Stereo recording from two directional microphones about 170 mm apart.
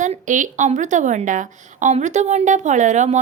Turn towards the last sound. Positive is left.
turn(degrees=-45)  # may be behind; listen again after turning